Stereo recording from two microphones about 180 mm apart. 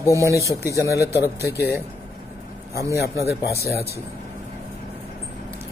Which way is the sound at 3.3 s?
60° left (ahead or behind).